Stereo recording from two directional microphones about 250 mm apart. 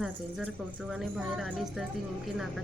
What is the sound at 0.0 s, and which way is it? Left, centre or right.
A woman's voice, centre.